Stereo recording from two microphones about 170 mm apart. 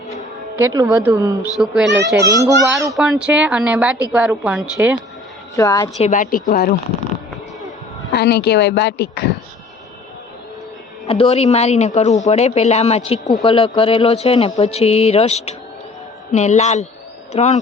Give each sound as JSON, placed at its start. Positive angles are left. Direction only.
{"t": 0.5, "sound": "a woman's voice", "side_deg": -20}
{"t": 1.5, "sound": "speech", "side_deg": 0}
{"t": 2.2, "sound": "a woman's voice", "side_deg": -20}
{"t": 2.9, "sound": "a woman's voice", "side_deg": -5}
{"t": 5.5, "sound": "a woman's voice", "side_deg": 20}
{"t": 6.0, "sound": "speech", "side_deg": 50}
{"t": 8.1, "sound": "speech", "side_deg": 75}
{"t": 11.0, "sound": "a woman's voice", "side_deg": 35}